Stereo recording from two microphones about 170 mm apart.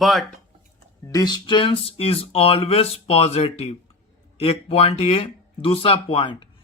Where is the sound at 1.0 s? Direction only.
20° left (ahead or behind).